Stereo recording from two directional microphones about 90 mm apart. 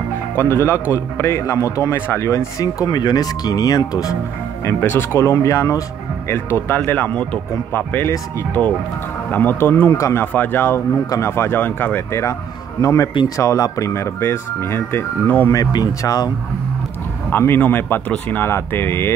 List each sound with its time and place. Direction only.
0.4 s a man's voice: 30° left (ahead or behind)
4.6 s a man's voice: 25° left (ahead or behind)
6.2 s speech: 25° left (ahead or behind)
8.6 s speech: 10° left (ahead or behind)
9.3 s a man's voice: 20° left (ahead or behind)
10.2 s speech: 20° left (ahead or behind)
12.1 s a man's voice: 35° left (ahead or behind)
15.5 s speech: 45° left (ahead or behind)
17.3 s speech: 25° left (ahead or behind)